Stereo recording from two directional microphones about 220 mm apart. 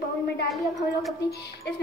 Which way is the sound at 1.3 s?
50° left (ahead or behind).